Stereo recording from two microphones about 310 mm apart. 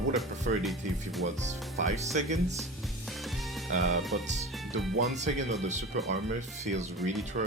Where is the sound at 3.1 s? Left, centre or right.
Centre.